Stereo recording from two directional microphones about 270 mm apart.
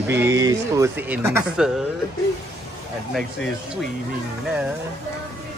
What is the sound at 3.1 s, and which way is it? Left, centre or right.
Speech, centre.